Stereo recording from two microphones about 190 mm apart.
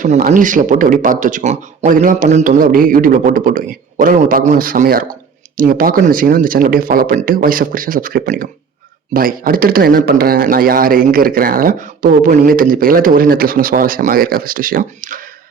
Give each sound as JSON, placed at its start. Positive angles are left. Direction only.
{"t": 0.0, "sound": "a man's voice", "side_deg": -45}